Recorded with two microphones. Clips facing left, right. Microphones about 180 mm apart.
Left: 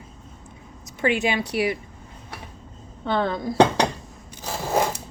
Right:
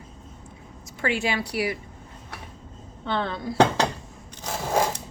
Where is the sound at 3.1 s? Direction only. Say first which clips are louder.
Left 4 dB; 40° left (ahead or behind).